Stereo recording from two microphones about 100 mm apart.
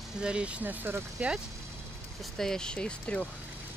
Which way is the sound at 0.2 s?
10° right (ahead or behind).